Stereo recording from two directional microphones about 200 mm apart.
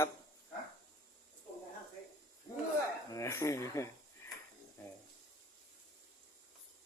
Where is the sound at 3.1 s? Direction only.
15° left (ahead or behind).